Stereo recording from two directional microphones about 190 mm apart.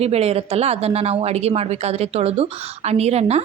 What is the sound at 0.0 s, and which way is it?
A woman's voice, 35° right (ahead or behind).